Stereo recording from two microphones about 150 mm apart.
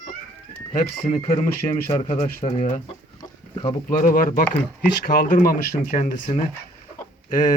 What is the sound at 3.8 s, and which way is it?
Speech, 65° left (ahead or behind).